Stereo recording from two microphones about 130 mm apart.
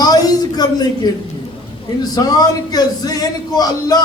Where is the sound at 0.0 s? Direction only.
30° left (ahead or behind).